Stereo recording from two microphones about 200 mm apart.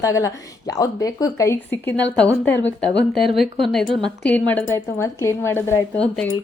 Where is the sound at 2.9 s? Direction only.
60° left (ahead or behind).